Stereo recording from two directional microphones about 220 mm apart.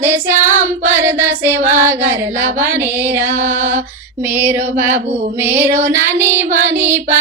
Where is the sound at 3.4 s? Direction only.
35° right (ahead or behind).